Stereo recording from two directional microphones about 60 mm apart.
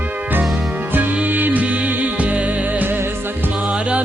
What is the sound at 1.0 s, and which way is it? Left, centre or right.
Music, right.